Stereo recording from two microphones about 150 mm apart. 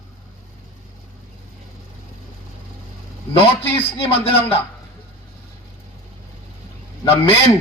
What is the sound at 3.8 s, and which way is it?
Speech, 40° left (ahead or behind).